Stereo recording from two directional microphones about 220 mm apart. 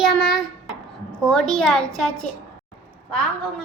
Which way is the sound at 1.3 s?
5° left (ahead or behind).